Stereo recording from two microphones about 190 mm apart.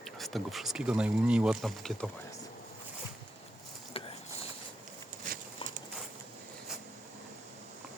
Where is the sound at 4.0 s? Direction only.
30° left (ahead or behind).